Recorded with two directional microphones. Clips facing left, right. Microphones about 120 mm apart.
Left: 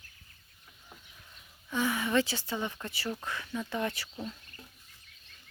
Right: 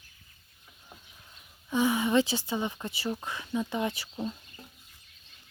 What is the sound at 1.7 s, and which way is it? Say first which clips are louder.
Speech: right 4 dB; 20° right (ahead or behind).